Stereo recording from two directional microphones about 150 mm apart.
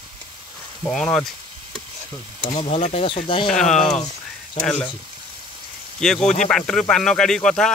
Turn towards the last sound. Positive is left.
turn(degrees=5)  # may be behind; listen again after turning